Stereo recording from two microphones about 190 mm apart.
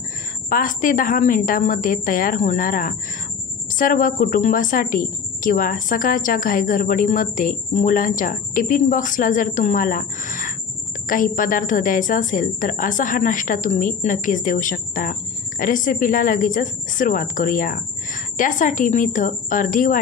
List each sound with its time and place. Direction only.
0.5 s a woman's voice: 45° left (ahead or behind)